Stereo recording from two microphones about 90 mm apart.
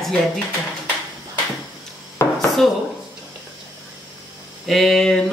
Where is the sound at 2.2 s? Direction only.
25° left (ahead or behind).